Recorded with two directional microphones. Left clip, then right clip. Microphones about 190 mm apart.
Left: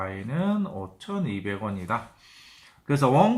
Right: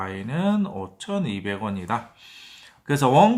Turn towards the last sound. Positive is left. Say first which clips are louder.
# right 4 dB
turn(degrees=-35)  # may be behind; listen again after turning